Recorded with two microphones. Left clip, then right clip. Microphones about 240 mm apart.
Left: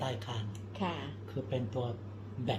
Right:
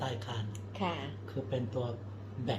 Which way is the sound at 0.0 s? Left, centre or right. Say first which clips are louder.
Even; centre.